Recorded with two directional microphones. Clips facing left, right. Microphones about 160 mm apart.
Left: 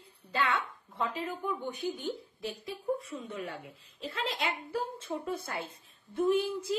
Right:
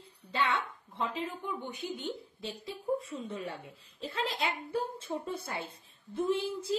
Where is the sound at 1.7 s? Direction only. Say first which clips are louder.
Left 3 dB; 25° right (ahead or behind).